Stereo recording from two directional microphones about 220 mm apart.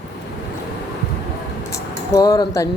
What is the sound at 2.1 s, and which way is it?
Speech, 15° left (ahead or behind).